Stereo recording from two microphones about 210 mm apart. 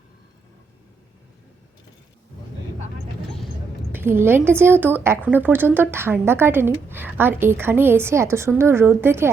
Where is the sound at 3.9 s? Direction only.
10° right (ahead or behind).